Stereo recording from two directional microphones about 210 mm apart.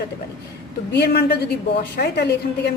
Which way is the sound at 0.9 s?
50° left (ahead or behind).